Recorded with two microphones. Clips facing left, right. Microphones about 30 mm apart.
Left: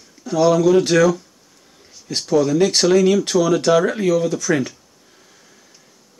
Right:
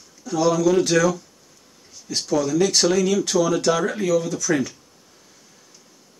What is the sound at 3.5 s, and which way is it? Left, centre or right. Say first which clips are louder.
Speech: left 5 dB; left.